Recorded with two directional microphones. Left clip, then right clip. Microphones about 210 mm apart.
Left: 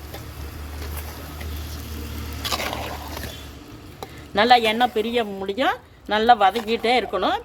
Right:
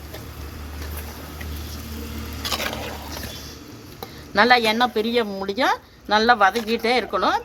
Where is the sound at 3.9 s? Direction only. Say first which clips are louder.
Right 2 dB; 5° left (ahead or behind).